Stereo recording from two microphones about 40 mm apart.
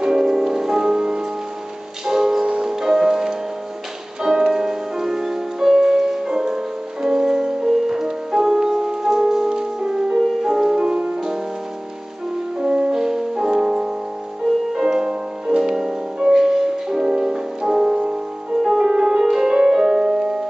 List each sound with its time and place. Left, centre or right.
0.0 s music: centre
12.5 s music: right